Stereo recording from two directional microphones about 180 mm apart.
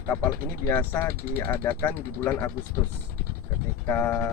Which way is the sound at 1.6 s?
10° left (ahead or behind).